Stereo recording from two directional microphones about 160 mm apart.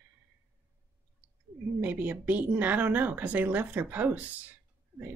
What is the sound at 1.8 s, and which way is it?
Speech, 10° right (ahead or behind).